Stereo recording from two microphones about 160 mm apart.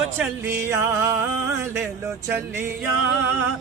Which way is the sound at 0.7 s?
15° right (ahead or behind).